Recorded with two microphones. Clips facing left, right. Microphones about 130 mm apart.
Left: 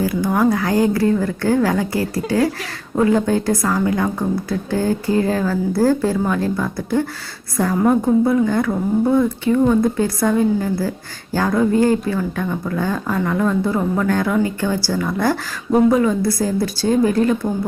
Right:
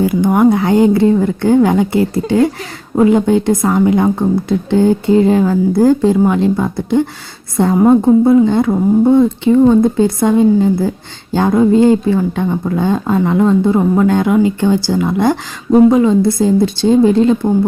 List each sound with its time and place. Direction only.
0.0 s a woman's voice: 25° right (ahead or behind)